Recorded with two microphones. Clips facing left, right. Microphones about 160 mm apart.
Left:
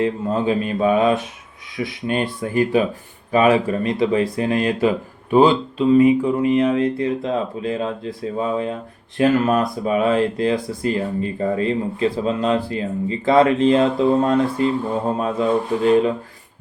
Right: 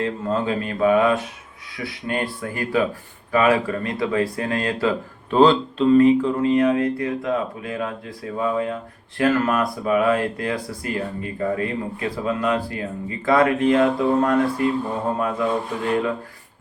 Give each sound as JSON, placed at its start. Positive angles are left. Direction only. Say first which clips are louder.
{"t": 0.0, "sound": "speech", "louder": "left 3 dB", "side_deg": 20}